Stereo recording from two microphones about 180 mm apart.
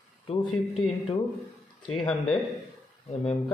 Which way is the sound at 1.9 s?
5° left (ahead or behind).